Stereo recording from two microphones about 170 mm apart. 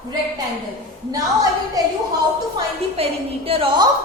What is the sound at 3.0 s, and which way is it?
Speech, 35° right (ahead or behind).